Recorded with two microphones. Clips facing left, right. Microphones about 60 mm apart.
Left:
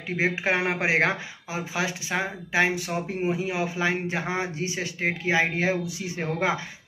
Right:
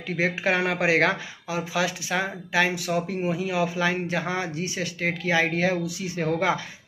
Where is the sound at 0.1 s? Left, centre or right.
Left.